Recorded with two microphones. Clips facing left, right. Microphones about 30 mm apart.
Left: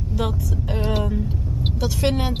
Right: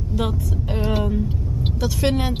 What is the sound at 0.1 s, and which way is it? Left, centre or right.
Speech, centre.